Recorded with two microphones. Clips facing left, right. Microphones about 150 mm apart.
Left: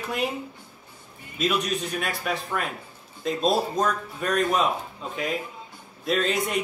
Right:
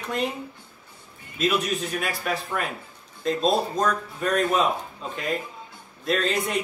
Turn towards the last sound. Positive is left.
turn(degrees=0)  # may be behind; listen again after turning